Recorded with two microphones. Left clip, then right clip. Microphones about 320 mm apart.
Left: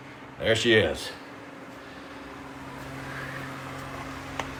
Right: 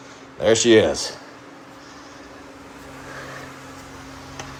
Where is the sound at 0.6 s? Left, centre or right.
Right.